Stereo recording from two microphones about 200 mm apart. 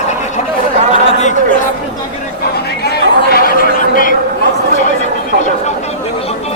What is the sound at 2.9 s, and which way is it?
Chatter, 50° left (ahead or behind).